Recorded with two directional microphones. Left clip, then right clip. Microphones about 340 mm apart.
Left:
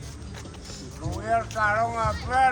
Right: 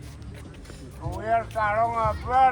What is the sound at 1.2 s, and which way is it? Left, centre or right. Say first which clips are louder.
Speech: even; right.